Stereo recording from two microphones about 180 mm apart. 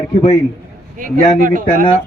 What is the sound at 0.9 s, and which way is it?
Speech, 50° right (ahead or behind).